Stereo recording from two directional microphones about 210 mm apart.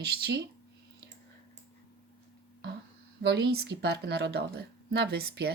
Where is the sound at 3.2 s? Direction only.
50° right (ahead or behind).